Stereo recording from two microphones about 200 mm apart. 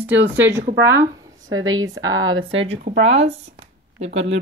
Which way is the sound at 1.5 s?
80° right.